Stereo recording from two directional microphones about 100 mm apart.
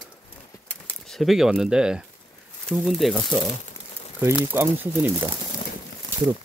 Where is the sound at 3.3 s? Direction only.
20° right (ahead or behind).